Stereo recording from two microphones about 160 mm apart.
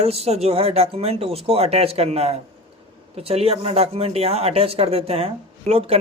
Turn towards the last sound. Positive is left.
turn(degrees=-40)  # may be behind; listen again after turning